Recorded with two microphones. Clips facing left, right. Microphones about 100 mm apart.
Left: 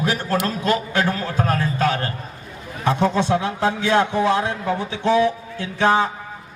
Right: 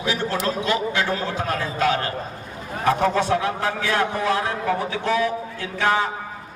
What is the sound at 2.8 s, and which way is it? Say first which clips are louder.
A man's voice: even; 25° left (ahead or behind).